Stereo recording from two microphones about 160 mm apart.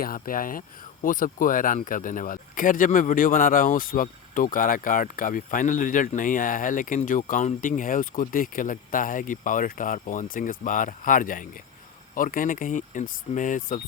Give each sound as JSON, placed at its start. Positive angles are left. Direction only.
{"t": 0.0, "sound": "speech", "side_deg": 65}